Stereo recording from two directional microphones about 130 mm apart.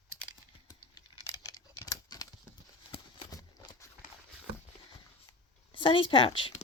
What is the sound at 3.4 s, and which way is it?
Horse, 35° left (ahead or behind).